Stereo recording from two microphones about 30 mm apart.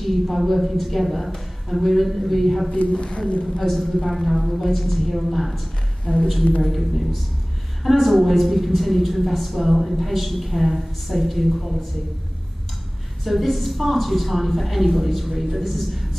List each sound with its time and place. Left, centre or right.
0.0 s a woman's voice: centre
2.9 s speech: left
3.5 s a woman's voice: centre
13.2 s a woman's voice: centre